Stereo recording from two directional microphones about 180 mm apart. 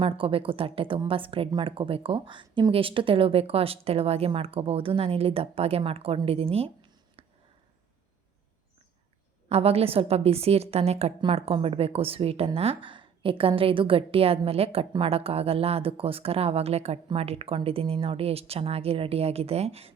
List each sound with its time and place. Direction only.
0.0 s a woman's voice: 30° right (ahead or behind)
7.2 s a sound: 30° right (ahead or behind)
9.5 s a woman's voice: 35° right (ahead or behind)